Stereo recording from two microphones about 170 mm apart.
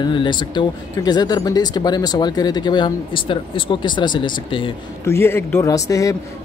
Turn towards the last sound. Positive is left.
turn(degrees=20)  # may be behind; listen again after turning